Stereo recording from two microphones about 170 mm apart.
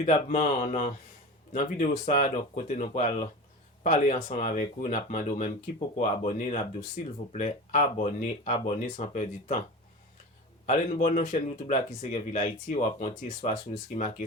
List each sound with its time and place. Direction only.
0.0 s speech: 45° left (ahead or behind)
10.7 s speech: 45° left (ahead or behind)